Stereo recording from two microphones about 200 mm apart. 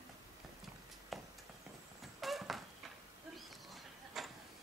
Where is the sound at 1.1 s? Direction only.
Centre (ahead or behind).